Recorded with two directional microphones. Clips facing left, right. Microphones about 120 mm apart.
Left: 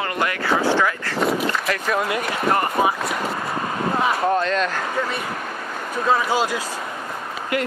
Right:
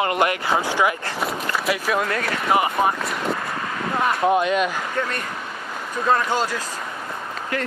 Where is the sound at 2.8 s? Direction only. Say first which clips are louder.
Left 1 dB; 5° left (ahead or behind).